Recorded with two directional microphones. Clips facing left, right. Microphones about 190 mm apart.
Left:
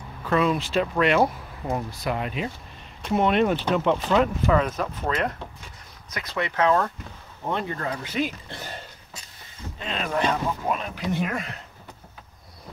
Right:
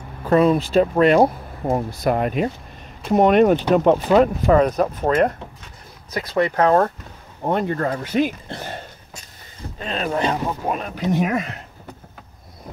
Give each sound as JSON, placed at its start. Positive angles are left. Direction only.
{"t": 0.2, "sound": "speech", "side_deg": -40}